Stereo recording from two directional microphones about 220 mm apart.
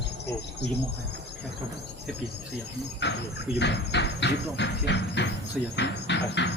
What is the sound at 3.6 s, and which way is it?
Speech, 50° left (ahead or behind).